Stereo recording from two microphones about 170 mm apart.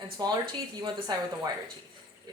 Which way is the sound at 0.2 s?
25° right (ahead or behind).